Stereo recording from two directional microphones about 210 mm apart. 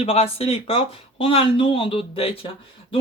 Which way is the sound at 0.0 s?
30° left (ahead or behind).